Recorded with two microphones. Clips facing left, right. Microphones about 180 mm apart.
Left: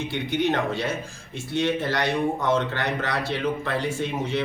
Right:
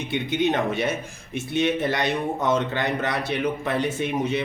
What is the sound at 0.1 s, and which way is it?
A man's voice, 20° right (ahead or behind).